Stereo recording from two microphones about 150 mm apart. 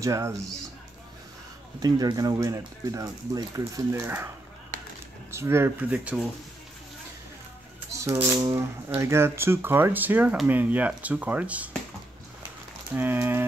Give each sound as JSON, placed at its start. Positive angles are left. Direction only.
{"t": 0.0, "sound": "speech", "side_deg": -20}
{"t": 1.8, "sound": "speech", "side_deg": -25}
{"t": 5.3, "sound": "speech", "side_deg": -15}
{"t": 8.4, "sound": "speech", "side_deg": -20}
{"t": 12.9, "sound": "speech", "side_deg": -15}